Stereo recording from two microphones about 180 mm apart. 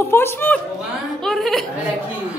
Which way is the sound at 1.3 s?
Centre (ahead or behind).